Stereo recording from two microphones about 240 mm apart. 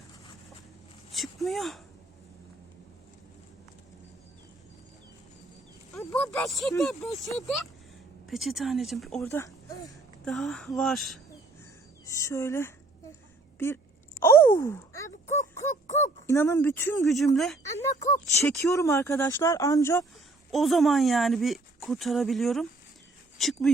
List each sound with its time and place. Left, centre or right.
1.1 s speech: centre
6.0 s speech: centre
10.2 s speech: centre
12.0 s speech: centre
14.2 s groan: centre
15.6 s a sound: left
16.2 s speech: centre
18.3 s speech: centre
20.5 s speech: centre